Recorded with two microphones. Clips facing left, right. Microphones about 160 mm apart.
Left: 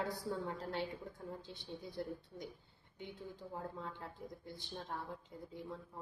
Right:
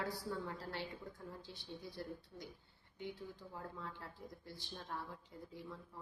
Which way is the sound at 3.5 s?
20° left (ahead or behind).